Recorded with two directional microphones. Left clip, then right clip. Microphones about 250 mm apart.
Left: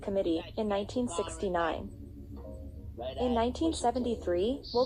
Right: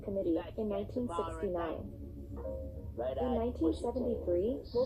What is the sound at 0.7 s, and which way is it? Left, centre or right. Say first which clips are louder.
A woman's voice: left 4 dB; left.